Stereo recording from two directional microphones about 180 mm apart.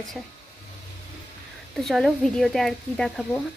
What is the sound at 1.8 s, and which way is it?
Speech, centre (ahead or behind).